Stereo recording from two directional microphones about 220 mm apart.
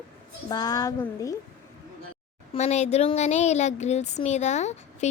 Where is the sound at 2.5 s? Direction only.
30° left (ahead or behind).